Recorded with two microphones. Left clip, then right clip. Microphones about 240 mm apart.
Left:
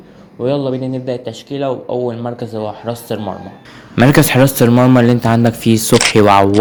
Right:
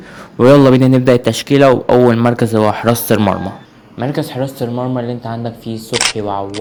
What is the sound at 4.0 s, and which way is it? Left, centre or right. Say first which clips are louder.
Speech: left 9 dB; left.